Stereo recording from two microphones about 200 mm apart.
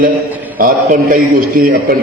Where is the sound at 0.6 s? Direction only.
45° right (ahead or behind).